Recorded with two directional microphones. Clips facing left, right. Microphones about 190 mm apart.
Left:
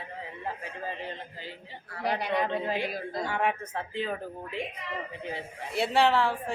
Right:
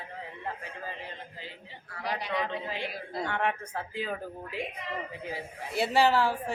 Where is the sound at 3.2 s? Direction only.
5° left (ahead or behind).